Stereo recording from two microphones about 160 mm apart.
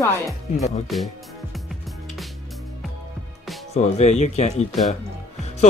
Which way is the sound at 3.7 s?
45° left (ahead or behind).